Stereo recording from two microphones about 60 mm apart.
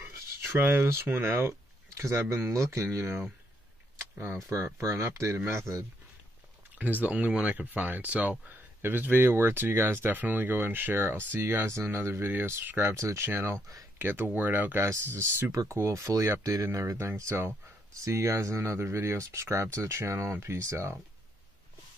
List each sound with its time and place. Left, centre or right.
0.6 s speech: right
0.8 s speech: right
2.4 s speech: right
4.5 s speech: right
6.8 s speech: right
9.1 s speech: right
13.3 s speech: right
14.8 s speech: right
15.5 s speech: right
15.8 s speech: right
17.0 s speech: right
18.0 s speech: right